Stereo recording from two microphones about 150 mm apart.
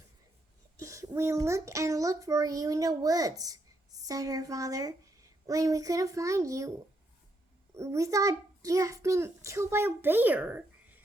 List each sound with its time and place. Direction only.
0.8 s a child's voice: 20° right (ahead or behind)
7.8 s a child's voice: 20° right (ahead or behind)